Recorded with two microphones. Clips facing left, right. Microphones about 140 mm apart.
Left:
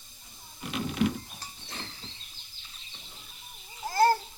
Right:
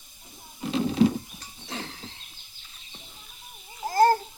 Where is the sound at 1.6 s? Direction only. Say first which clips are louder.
Right 9 dB; 80° right.